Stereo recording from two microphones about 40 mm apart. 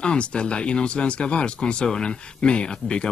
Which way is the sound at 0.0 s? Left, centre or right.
Left.